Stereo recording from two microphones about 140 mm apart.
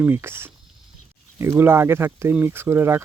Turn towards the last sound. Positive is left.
turn(degrees=-15)  # may be behind; listen again after turning